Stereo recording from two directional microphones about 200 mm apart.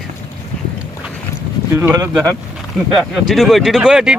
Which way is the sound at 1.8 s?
15° right (ahead or behind).